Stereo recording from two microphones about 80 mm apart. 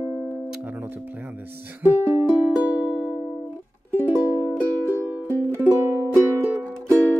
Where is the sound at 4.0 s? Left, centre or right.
Right.